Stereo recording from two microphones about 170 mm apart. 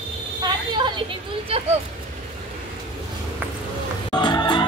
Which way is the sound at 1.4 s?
35° right (ahead or behind).